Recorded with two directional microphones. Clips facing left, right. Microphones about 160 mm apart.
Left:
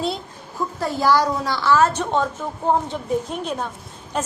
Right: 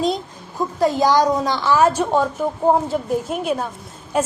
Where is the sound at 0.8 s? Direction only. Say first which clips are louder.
Right 3 dB; 15° right (ahead or behind).